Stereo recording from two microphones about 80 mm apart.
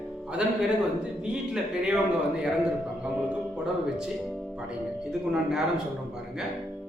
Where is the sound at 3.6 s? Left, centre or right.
Centre.